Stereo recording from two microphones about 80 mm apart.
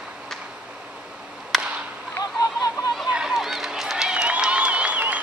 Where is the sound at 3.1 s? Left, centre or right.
Centre.